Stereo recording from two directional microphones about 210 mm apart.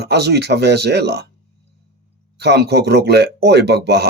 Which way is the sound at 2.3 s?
50° right (ahead or behind).